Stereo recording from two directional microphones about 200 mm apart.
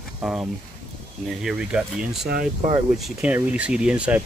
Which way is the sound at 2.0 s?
45° right (ahead or behind).